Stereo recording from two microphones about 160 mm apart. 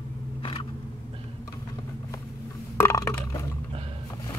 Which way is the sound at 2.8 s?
15° left (ahead or behind).